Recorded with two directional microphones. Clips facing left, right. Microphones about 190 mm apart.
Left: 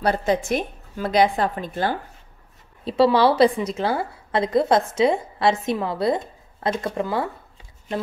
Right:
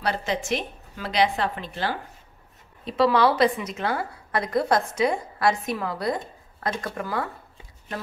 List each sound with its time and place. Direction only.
0.0 s a woman's voice: 45° left (ahead or behind)
2.8 s a woman's voice: 30° left (ahead or behind)